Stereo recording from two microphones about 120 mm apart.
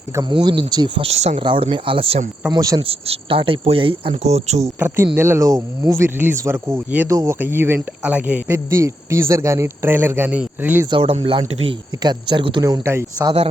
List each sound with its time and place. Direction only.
0.2 s speech: 40° right (ahead or behind)
1.0 s cricket: 65° right (ahead or behind)
1.4 s speech: 50° right (ahead or behind)
2.5 s speech: 30° right (ahead or behind)
2.8 s speech: 50° right (ahead or behind)
4.2 s cricket: 65° right (ahead or behind)
5.1 s a man's voice: 20° right (ahead or behind)
7.1 s a man's voice: 25° right (ahead or behind)
10.9 s speech: 50° right (ahead or behind)
12.6 s a man's voice: 25° right (ahead or behind)